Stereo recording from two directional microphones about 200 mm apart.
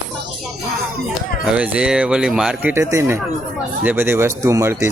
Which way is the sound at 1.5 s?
5° right (ahead or behind).